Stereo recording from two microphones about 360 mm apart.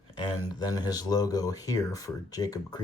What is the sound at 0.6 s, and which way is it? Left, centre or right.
Speech, centre.